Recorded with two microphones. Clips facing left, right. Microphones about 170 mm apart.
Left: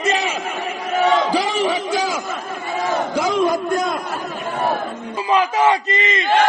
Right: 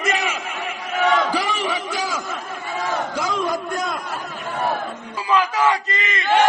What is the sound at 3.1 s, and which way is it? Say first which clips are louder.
Battle cry: left 8 dB; 25° left (ahead or behind).